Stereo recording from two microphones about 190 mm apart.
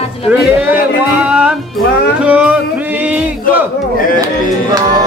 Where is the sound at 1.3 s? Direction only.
5° right (ahead or behind).